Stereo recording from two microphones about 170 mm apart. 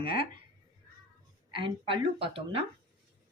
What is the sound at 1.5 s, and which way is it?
Speech, 30° right (ahead or behind).